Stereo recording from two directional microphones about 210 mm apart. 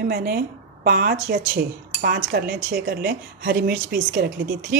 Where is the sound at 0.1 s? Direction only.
45° right (ahead or behind).